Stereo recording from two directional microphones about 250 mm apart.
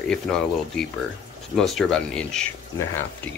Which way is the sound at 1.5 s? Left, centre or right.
Centre.